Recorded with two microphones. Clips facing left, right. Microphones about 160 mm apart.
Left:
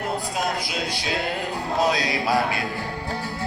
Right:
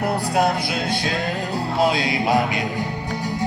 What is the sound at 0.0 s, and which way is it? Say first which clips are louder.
Music: right 6 dB; 65° right (ahead or behind).